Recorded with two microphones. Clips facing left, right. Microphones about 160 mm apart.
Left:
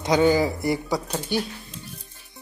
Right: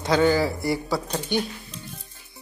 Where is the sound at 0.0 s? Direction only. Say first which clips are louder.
Left 1 dB; 15° left (ahead or behind).